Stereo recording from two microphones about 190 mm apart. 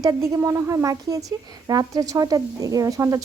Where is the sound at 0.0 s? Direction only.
15° right (ahead or behind).